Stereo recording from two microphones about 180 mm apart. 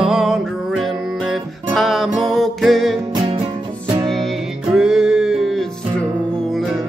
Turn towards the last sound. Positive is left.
turn(degrees=0)  # may be behind; listen again after turning